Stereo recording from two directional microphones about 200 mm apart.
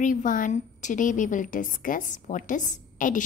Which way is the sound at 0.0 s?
40° left (ahead or behind).